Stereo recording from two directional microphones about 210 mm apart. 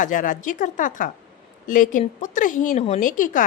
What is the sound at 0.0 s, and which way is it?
A woman's voice, 40° left (ahead or behind).